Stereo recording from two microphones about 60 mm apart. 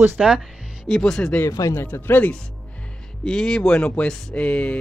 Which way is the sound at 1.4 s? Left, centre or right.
Left.